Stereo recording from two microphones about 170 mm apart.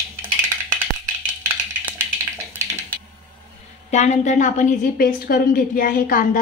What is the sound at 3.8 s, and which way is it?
A woman's voice, 40° left (ahead or behind).